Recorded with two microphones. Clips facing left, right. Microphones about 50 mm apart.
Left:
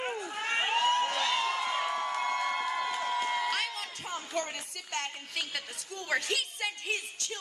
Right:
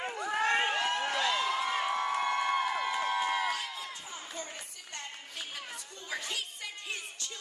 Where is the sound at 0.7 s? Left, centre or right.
Left.